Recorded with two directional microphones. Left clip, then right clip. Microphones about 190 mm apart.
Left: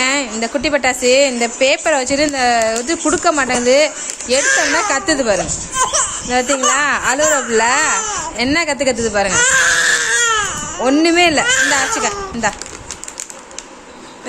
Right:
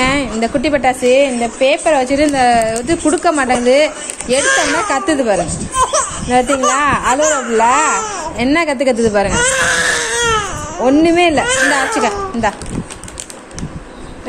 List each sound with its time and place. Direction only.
0.0 s speech: centre (ahead or behind)
4.4 s speech: 15° left (ahead or behind)
4.8 s speech: centre (ahead or behind)
5.8 s speech: 15° left (ahead or behind)
6.3 s speech: centre (ahead or behind)
7.0 s speech: 20° left (ahead or behind)
7.7 s speech: 5° left (ahead or behind)
9.3 s baby cry: 15° left (ahead or behind)
10.9 s speech: centre (ahead or behind)